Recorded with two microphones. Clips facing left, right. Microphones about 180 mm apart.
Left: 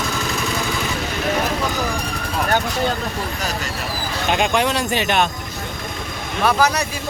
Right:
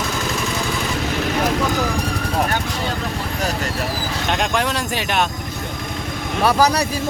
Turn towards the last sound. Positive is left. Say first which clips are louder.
# right 2 dB
turn(degrees=-35)  # may be behind; listen again after turning